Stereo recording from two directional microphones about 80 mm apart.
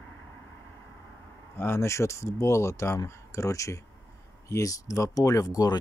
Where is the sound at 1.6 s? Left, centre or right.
Left.